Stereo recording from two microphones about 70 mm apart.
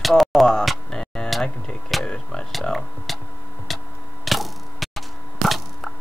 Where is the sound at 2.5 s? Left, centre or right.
Centre.